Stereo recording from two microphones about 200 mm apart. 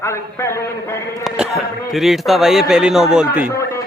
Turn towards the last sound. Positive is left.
turn(degrees=15)  # may be behind; listen again after turning